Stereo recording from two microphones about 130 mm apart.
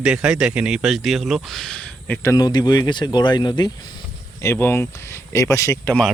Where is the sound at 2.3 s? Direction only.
35° left (ahead or behind).